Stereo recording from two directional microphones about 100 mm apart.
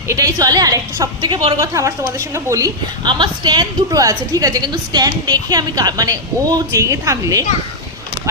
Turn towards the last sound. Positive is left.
turn(degrees=-30)  # may be behind; listen again after turning